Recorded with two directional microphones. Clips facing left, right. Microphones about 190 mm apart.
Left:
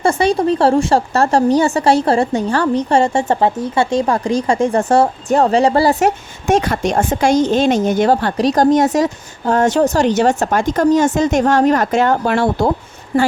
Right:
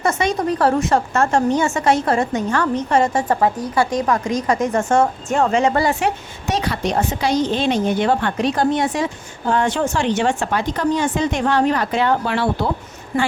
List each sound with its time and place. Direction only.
0.0 s a woman's voice: 30° left (ahead or behind)
13.1 s a woman's voice: 30° left (ahead or behind)